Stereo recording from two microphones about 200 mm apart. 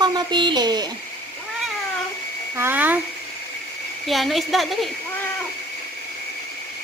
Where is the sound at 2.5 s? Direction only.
10° right (ahead or behind).